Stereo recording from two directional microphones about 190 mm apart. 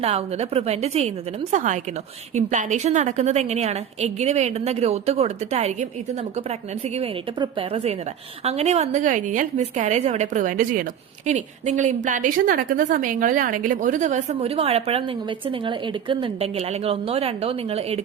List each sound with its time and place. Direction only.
0.0 s a woman's voice: 35° right (ahead or behind)
6.9 s a woman's voice: 25° right (ahead or behind)